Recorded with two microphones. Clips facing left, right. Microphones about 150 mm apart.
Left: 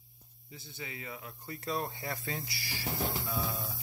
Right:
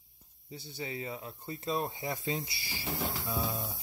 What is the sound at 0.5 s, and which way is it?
Speech, 30° right (ahead or behind).